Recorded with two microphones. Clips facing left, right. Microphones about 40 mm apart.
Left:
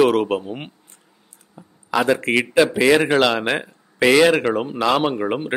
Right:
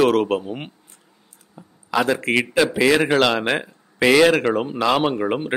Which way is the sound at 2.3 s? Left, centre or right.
Centre.